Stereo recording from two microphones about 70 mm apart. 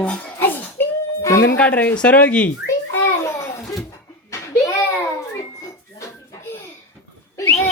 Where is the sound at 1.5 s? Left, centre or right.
Left.